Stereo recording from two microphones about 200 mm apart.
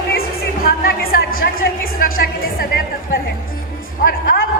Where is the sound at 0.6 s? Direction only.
50° left (ahead or behind).